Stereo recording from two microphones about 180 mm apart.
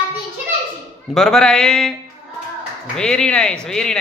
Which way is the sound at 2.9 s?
5° left (ahead or behind).